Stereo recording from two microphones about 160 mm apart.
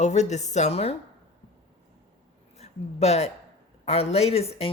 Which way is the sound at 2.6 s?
45° left (ahead or behind).